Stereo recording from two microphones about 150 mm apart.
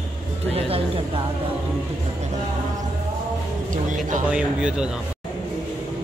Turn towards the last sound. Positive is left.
turn(degrees=-5)  # may be behind; listen again after turning